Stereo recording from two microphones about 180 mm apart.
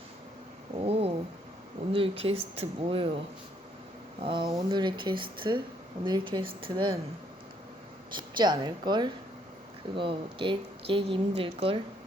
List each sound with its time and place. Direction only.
0.8 s cat: 35° right (ahead or behind)
1.9 s speech: 30° right (ahead or behind)
4.2 s a woman's voice: 25° right (ahead or behind)
8.1 s a woman's voice: 25° right (ahead or behind)